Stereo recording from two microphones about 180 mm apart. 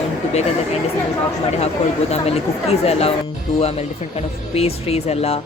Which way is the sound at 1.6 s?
35° left (ahead or behind).